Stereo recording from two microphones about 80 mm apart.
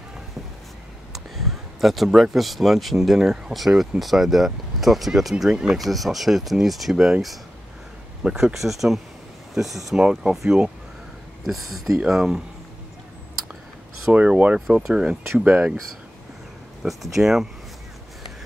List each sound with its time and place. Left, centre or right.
1.1 s speech: centre
14.1 s speech: centre
16.8 s speech: centre